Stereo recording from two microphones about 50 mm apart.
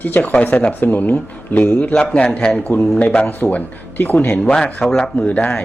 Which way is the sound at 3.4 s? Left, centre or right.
Left.